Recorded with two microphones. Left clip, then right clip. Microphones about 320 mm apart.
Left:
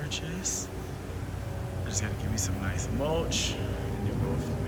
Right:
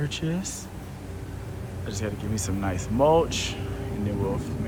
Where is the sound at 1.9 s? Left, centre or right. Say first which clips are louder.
Right 4 dB; centre.